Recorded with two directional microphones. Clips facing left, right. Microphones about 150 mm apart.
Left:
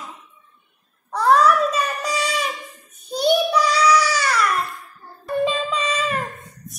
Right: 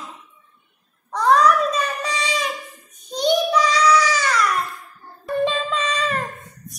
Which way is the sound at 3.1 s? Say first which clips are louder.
Left 1 dB; 10° left (ahead or behind).